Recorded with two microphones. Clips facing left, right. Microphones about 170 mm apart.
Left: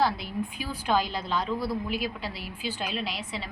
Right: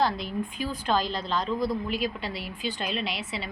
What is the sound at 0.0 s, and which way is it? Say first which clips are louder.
A woman's voice: even; 5° left (ahead or behind).